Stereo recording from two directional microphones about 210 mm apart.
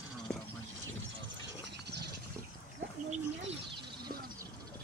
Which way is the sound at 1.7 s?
50° right (ahead or behind).